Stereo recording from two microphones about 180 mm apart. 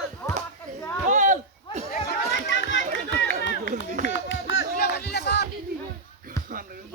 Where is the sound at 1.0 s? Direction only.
45° right (ahead or behind).